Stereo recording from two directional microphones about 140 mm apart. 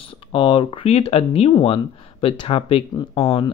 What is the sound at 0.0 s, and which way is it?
Speech, 40° left (ahead or behind).